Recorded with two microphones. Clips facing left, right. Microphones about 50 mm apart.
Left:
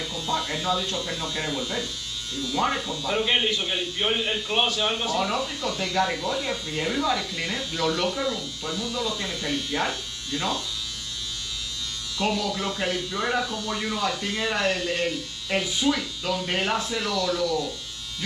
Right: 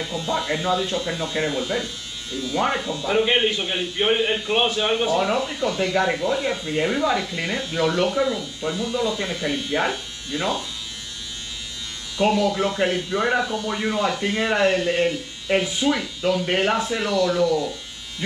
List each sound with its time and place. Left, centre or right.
0.0 s speech: right
12.2 s speech: right